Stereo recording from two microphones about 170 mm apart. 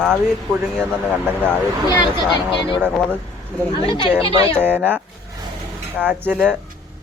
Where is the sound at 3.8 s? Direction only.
30° left (ahead or behind).